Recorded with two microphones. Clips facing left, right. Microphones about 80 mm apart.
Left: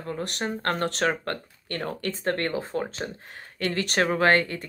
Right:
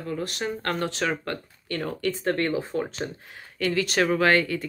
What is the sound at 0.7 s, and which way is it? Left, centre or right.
Speech, left.